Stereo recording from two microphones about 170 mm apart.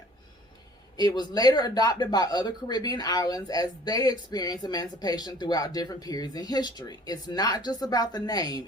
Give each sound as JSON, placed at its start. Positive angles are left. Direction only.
{"t": 0.9, "sound": "speech", "side_deg": 25}